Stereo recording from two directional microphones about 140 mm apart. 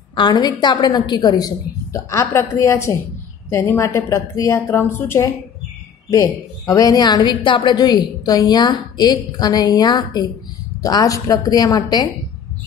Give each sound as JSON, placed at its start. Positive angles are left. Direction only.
{"t": 0.1, "sound": "a woman's voice", "side_deg": 30}